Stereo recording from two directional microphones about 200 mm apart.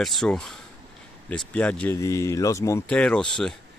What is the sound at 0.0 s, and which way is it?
Speech, centre (ahead or behind).